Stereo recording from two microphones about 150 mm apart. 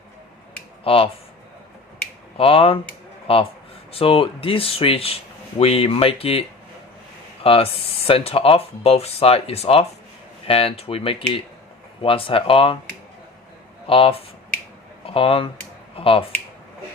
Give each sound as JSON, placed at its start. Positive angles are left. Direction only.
{"t": 0.9, "sound": "speech", "side_deg": 40}
{"t": 2.4, "sound": "speech", "side_deg": 40}
{"t": 7.4, "sound": "speech", "side_deg": 40}
{"t": 13.8, "sound": "speech", "side_deg": 40}